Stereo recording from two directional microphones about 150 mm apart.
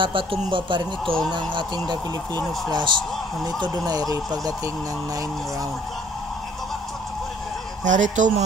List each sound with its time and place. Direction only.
0.0 s speech: 35° right (ahead or behind)
7.8 s speech: 55° right (ahead or behind)